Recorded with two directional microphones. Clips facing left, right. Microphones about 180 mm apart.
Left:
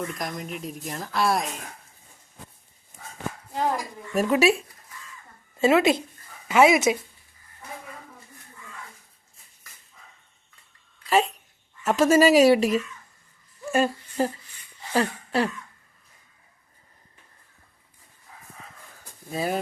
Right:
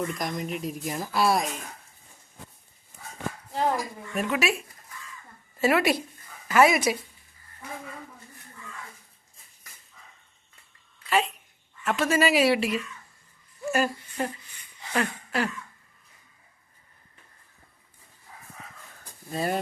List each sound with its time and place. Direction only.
0.0 s speech: centre (ahead or behind)
4.1 s speech: 35° left (ahead or behind)
5.5 s speech: 25° left (ahead or behind)
11.1 s speech: 40° left (ahead or behind)
13.7 s speech: 30° left (ahead or behind)
14.9 s a sound: 30° left (ahead or behind)
19.3 s speech: centre (ahead or behind)